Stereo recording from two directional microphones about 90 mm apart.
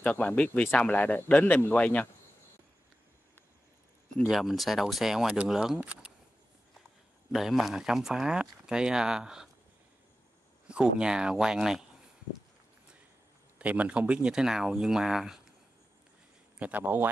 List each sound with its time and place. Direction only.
0.0 s speech: 15° left (ahead or behind)
4.3 s speech: centre (ahead or behind)
7.3 s speech: 5° right (ahead or behind)
10.7 s speech: 10° right (ahead or behind)
13.6 s speech: 15° right (ahead or behind)
16.5 s speech: 15° right (ahead or behind)